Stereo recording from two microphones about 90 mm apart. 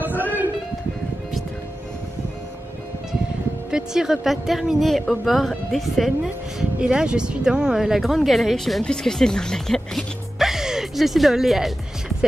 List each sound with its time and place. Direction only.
3.7 s speech: 5° right (ahead or behind)